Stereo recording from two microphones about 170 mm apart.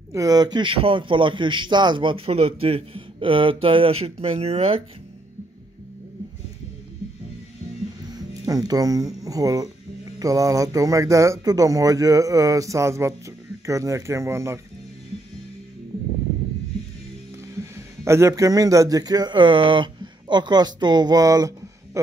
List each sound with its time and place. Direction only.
0.1 s a man's voice: 20° right (ahead or behind)
8.1 s speech: 20° right (ahead or behind)
17.7 s speech: 15° right (ahead or behind)